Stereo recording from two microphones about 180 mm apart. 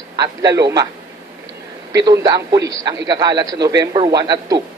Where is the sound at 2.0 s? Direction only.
20° right (ahead or behind).